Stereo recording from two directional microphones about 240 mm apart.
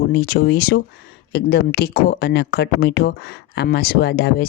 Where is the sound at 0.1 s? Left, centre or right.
Left.